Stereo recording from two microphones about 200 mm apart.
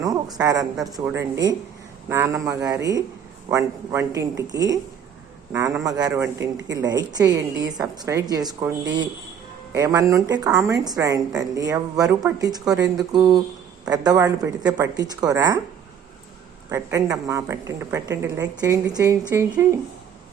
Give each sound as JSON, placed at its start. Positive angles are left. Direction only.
{"t": 0.3, "sound": "a woman's voice", "side_deg": -20}
{"t": 16.6, "sound": "a woman's voice", "side_deg": -15}